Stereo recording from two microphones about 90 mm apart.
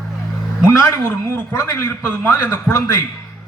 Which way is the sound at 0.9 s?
30° left (ahead or behind).